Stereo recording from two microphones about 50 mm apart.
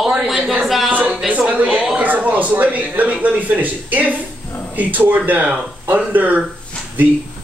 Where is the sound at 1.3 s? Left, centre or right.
Right.